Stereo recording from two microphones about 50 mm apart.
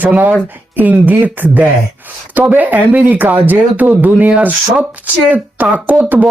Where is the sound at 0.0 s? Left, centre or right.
Right.